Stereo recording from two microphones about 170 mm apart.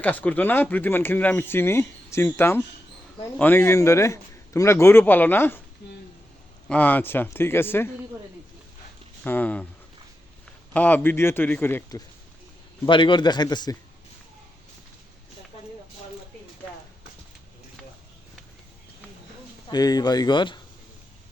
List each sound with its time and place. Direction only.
0.0 s speech: 10° left (ahead or behind)
6.7 s speech: 10° left (ahead or behind)
9.2 s speech: 10° left (ahead or behind)
10.8 s speech: 10° left (ahead or behind)
12.8 s a man's voice: 30° left (ahead or behind)
19.6 s a man's voice: 25° left (ahead or behind)